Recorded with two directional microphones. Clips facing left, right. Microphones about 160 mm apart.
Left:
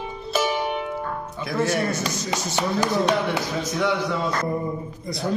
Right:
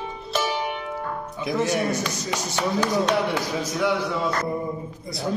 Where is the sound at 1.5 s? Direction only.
15° right (ahead or behind).